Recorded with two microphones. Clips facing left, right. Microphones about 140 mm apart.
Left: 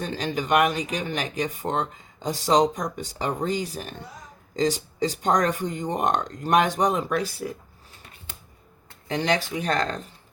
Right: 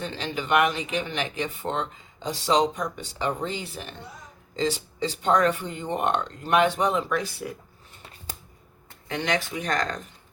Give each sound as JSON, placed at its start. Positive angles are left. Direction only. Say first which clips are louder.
{"t": 0.0, "sound": "speech", "louder": "left 3 dB", "side_deg": 40}
{"t": 9.0, "sound": "speech", "louder": "left 3 dB", "side_deg": 35}